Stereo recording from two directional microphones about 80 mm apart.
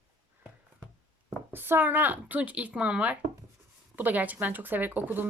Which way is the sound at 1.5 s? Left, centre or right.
Right.